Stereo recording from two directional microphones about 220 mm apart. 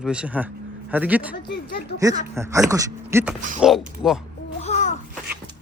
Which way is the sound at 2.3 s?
10° right (ahead or behind).